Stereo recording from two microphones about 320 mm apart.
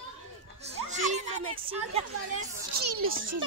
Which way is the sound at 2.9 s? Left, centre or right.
Right.